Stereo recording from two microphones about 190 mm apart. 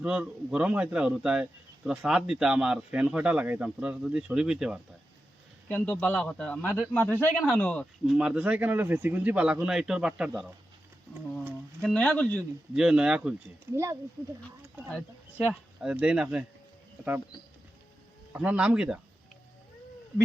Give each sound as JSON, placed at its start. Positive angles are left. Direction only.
{"t": 0.0, "sound": "a man's voice", "side_deg": -5}
{"t": 5.6, "sound": "a man's voice", "side_deg": 10}
{"t": 11.8, "sound": "a man's voice", "side_deg": 5}
{"t": 12.7, "sound": "a man's voice", "side_deg": -5}
{"t": 13.7, "sound": "speech", "side_deg": -15}
{"t": 14.8, "sound": "speech", "side_deg": 5}
{"t": 15.4, "sound": "speech", "side_deg": -5}
{"t": 18.3, "sound": "speech", "side_deg": -5}